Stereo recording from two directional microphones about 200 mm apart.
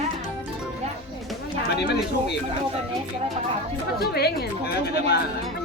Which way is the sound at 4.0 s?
55° left (ahead or behind).